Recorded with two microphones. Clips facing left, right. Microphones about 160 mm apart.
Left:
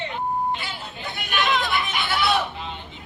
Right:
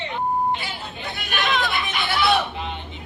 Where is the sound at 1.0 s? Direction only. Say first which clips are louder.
Left 1 dB; 65° right (ahead or behind).